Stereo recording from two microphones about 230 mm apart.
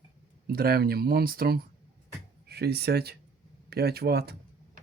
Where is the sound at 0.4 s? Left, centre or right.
Right.